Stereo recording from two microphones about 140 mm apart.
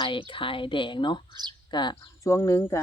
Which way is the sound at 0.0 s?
35° left (ahead or behind).